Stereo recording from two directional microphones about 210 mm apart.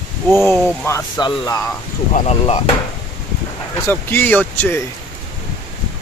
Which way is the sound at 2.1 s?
30° left (ahead or behind).